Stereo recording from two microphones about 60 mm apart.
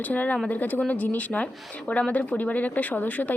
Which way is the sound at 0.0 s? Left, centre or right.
Left.